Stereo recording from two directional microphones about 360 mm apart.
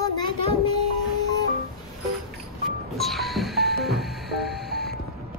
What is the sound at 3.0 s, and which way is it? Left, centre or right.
Music, centre.